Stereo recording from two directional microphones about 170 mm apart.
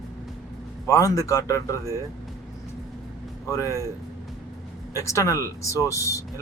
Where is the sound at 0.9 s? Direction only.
20° left (ahead or behind).